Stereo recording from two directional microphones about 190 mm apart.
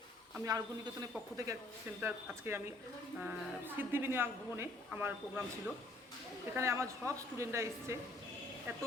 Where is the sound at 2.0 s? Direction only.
10° right (ahead or behind).